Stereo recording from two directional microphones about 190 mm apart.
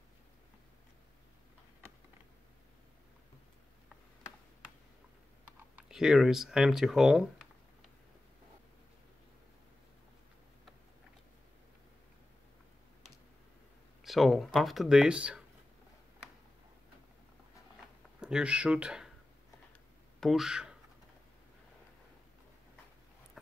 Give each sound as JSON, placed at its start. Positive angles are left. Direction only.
{"t": 5.8, "sound": "speech", "side_deg": -5}
{"t": 14.0, "sound": "speech", "side_deg": 0}
{"t": 18.2, "sound": "speech", "side_deg": -5}
{"t": 20.2, "sound": "speech", "side_deg": 0}
{"t": 23.4, "sound": "a sound", "side_deg": 0}